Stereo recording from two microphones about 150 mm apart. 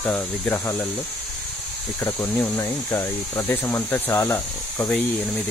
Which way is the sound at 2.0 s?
15° left (ahead or behind).